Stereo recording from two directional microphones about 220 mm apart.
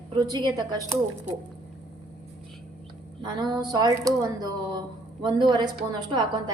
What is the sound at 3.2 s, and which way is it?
A woman's voice, 20° right (ahead or behind).